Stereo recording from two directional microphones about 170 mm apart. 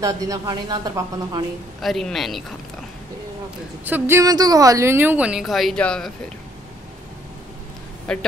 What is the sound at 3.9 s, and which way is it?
Speech, 15° right (ahead or behind).